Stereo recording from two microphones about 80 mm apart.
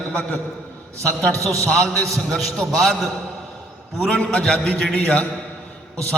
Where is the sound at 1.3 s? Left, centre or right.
Right.